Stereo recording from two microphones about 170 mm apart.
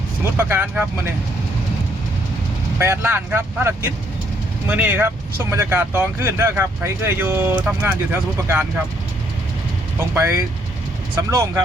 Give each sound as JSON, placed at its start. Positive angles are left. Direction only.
{"t": 0.3, "sound": "speech", "side_deg": -10}
{"t": 2.7, "sound": "speech", "side_deg": -15}
{"t": 11.2, "sound": "speech", "side_deg": -20}